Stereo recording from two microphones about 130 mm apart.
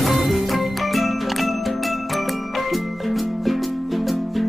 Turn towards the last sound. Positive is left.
turn(degrees=0)  # may be behind; listen again after turning